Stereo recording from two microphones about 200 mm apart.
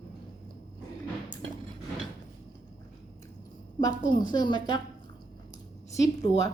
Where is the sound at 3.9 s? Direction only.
40° left (ahead or behind).